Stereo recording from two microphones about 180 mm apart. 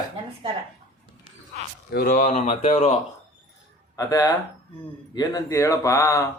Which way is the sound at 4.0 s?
20° left (ahead or behind).